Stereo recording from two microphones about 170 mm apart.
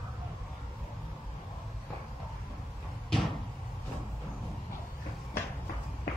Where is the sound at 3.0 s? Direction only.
Centre (ahead or behind).